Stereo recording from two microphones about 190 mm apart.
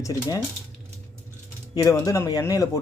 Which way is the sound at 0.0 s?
15° left (ahead or behind).